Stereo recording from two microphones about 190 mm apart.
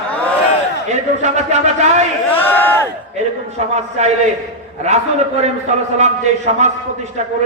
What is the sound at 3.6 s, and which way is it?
Speech, 35° right (ahead or behind).